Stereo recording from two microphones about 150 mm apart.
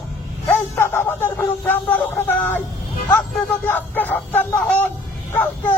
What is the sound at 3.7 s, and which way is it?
A man's voice, 10° left (ahead or behind).